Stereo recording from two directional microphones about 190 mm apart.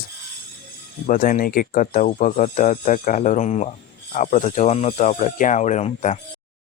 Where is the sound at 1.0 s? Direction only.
45° left (ahead or behind).